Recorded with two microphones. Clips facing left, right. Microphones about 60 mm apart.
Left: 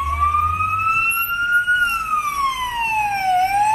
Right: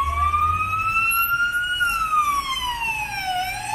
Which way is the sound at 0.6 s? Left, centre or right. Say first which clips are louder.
Left 3 dB; left.